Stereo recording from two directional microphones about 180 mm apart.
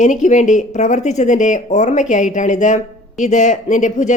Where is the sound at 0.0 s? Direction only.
45° left (ahead or behind).